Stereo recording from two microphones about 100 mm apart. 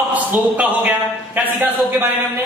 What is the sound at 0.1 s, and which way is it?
Speech, 15° right (ahead or behind).